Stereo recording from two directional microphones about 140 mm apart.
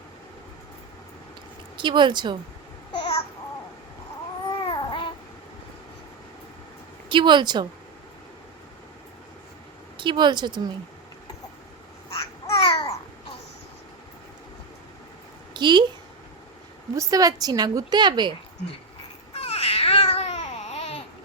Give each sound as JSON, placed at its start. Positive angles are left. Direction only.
{"t": 1.7, "sound": "speech", "side_deg": -35}
{"t": 3.0, "sound": "babbling", "side_deg": 45}
{"t": 4.6, "sound": "babbling", "side_deg": 35}
{"t": 7.1, "sound": "speech", "side_deg": -35}
{"t": 10.0, "sound": "speech", "side_deg": -35}
{"t": 12.6, "sound": "babbling", "side_deg": 40}
{"t": 15.5, "sound": "a woman's voice", "side_deg": -35}
{"t": 16.9, "sound": "a woman's voice", "side_deg": -25}
{"t": 19.3, "sound": "babbling", "side_deg": 45}